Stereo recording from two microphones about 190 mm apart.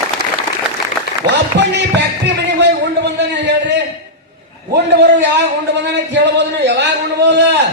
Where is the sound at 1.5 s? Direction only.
65° right (ahead or behind).